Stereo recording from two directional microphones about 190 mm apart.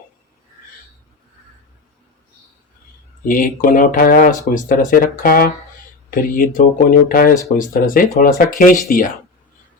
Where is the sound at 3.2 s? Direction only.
45° left (ahead or behind).